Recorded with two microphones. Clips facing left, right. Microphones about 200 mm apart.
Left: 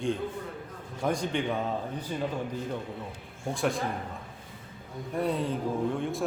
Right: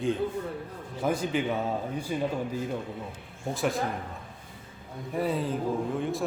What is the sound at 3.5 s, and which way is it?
Speech, centre (ahead or behind).